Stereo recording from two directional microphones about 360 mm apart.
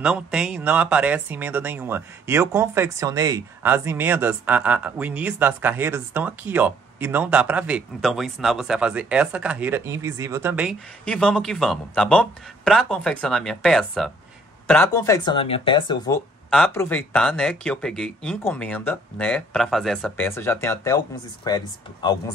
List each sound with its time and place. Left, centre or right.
0.0 s speech: centre
16.4 s speech: centre